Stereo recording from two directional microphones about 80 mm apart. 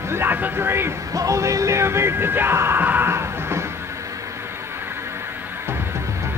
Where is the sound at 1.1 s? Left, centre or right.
Right.